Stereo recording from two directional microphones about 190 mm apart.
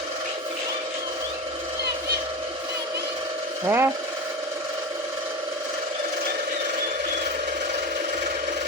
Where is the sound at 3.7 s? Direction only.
10° right (ahead or behind).